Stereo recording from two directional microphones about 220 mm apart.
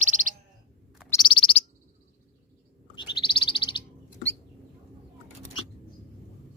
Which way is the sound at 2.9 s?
20° left (ahead or behind).